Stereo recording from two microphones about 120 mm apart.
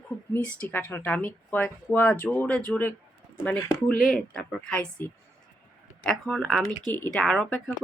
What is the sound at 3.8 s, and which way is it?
Speech, centre (ahead or behind).